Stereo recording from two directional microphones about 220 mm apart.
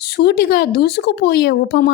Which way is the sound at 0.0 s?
45° left (ahead or behind).